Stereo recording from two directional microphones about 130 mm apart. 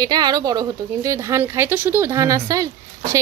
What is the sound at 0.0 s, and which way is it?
A woman's voice, 30° right (ahead or behind).